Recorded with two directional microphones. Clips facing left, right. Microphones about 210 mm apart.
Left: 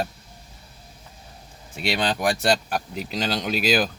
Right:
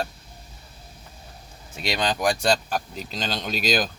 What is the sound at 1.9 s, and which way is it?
Speech, 5° left (ahead or behind).